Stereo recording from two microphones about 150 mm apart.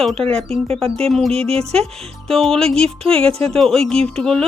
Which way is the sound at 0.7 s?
40° right (ahead or behind).